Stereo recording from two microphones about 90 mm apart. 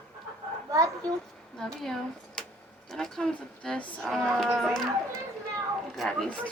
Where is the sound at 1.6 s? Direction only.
5° left (ahead or behind).